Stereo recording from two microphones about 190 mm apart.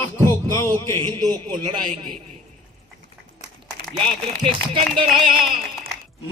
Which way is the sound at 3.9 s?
5° left (ahead or behind).